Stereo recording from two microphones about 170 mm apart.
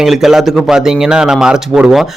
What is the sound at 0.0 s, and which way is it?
A man's voice, centre (ahead or behind).